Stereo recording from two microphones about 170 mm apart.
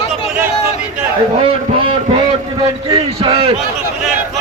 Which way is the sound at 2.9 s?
30° right (ahead or behind).